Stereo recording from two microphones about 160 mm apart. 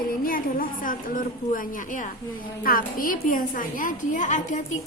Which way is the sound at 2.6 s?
60° left (ahead or behind).